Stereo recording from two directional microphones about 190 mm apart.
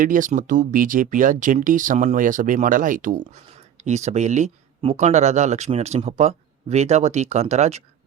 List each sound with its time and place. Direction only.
0.0 s speech: 45° right (ahead or behind)